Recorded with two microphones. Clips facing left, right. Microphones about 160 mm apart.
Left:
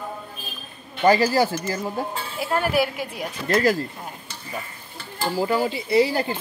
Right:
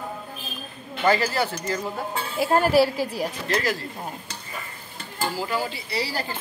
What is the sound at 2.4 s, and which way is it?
Speech, 40° right (ahead or behind).